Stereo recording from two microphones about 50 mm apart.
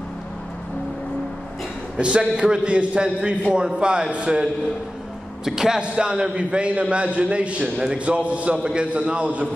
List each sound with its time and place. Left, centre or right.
2.0 s a man's voice: right